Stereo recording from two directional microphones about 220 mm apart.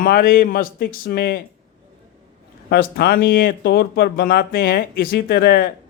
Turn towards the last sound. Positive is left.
turn(degrees=40)  # may be behind; listen again after turning